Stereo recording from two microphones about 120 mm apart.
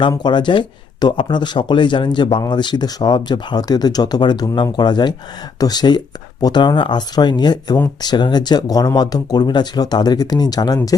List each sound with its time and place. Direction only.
0.2 s speech: 40° left (ahead or behind)